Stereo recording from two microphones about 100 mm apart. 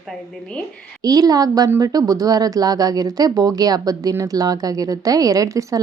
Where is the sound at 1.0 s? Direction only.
40° right (ahead or behind).